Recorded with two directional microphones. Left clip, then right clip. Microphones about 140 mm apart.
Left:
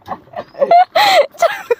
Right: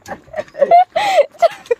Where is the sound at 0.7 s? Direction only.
40° left (ahead or behind).